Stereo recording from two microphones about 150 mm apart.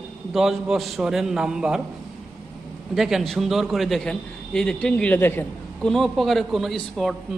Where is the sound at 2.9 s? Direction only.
Centre (ahead or behind); by 5.9 s 15° left (ahead or behind).